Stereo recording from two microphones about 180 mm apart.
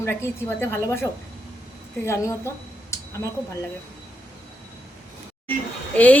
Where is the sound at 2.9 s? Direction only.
15° left (ahead or behind).